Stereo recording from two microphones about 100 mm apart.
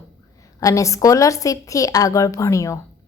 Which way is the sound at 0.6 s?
30° left (ahead or behind).